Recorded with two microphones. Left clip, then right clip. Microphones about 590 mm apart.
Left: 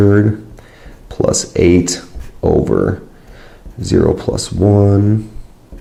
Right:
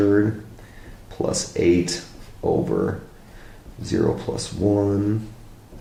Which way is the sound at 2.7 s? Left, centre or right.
Left.